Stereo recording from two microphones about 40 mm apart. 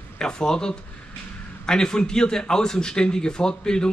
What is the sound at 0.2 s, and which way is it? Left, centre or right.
Speech, centre.